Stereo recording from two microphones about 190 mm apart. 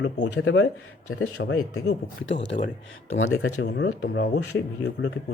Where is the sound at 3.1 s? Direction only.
90° left.